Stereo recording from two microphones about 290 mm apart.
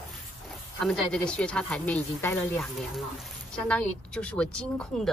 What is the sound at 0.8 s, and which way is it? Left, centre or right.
Speech, centre.